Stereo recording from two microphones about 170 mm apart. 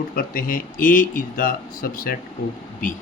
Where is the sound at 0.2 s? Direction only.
55° left (ahead or behind).